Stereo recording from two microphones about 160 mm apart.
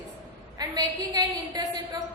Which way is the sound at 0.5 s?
25° right (ahead or behind).